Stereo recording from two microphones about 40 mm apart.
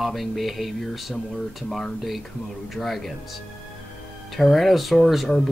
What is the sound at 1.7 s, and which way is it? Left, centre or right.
Speech, centre.